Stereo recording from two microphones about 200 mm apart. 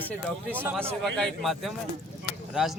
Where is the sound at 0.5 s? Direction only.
10° right (ahead or behind).